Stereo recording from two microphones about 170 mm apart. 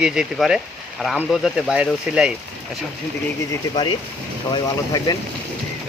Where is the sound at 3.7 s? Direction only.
30° left (ahead or behind).